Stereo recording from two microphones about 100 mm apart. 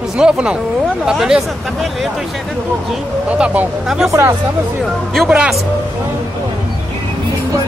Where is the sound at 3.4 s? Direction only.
10° right (ahead or behind).